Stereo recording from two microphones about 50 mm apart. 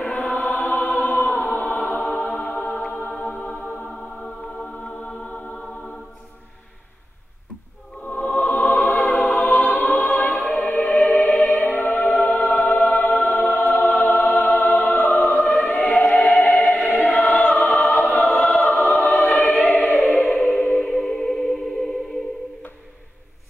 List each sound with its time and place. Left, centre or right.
0.0 s choir: left
2.3 s music: left
3.9 s music: centre
8.1 s music: left
12.7 s choir: left
14.0 s music: left
15.3 s choir: left
15.9 s choir: centre
16.3 s music: left
16.8 s choir: left
17.7 s music: left
19.0 s choir: left
20.1 s music: left
20.8 s music: centre